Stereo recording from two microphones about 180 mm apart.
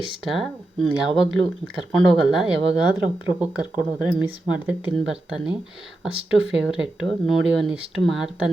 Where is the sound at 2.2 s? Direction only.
5° right (ahead or behind).